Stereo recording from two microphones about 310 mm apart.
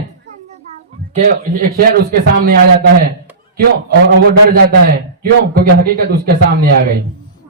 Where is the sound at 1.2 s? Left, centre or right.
Right.